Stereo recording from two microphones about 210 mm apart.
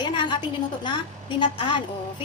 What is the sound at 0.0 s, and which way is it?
A woman's voice, 20° left (ahead or behind).